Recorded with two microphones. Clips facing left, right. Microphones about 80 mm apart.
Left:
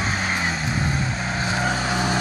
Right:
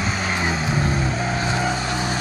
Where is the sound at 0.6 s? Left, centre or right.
Centre.